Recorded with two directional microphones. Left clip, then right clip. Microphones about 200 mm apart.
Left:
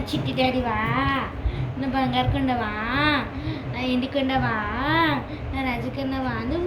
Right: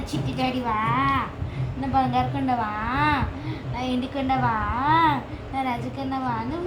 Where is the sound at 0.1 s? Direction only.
20° right (ahead or behind).